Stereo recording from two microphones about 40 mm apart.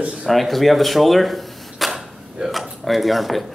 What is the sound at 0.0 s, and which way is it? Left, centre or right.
Speech, right.